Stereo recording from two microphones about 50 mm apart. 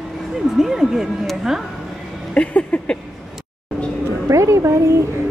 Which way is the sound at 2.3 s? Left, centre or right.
Left.